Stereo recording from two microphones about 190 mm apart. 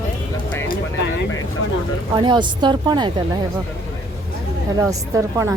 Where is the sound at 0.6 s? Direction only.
65° left (ahead or behind).